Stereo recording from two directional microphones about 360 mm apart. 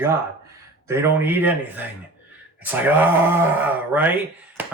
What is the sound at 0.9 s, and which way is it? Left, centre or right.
Speech, centre.